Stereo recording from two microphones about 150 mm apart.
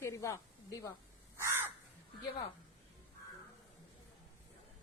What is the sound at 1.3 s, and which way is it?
Crow, 15° right (ahead or behind).